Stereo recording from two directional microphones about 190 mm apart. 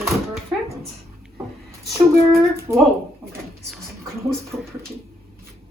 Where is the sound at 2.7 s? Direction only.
15° right (ahead or behind).